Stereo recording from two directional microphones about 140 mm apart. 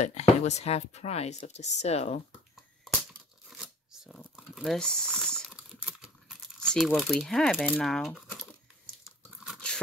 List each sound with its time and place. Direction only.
0.0 s speech: 50° left (ahead or behind)
2.5 s finger snapping: centre (ahead or behind)
3.4 s shuffling cards: 5° right (ahead or behind)
4.4 s speech: centre (ahead or behind)
5.8 s a sound: 5° right (ahead or behind)
6.6 s speech: 5° left (ahead or behind)
9.0 s chewing: 5° right (ahead or behind)